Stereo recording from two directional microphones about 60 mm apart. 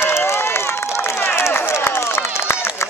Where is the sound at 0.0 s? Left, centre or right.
Left.